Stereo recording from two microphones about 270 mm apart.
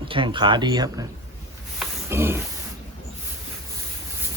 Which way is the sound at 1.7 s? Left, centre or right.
Centre.